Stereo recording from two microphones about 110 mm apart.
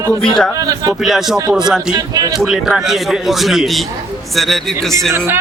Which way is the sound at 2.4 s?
5° right (ahead or behind).